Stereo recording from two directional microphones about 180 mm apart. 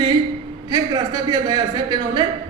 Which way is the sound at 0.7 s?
20° right (ahead or behind).